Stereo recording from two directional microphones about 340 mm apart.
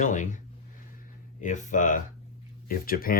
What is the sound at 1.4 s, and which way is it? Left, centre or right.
Speech, left.